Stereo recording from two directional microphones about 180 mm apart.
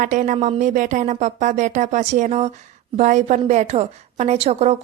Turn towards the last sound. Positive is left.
turn(degrees=-35)  # may be behind; listen again after turning